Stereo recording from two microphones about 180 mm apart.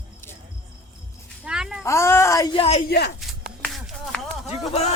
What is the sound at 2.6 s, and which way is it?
Speech, 35° left (ahead or behind).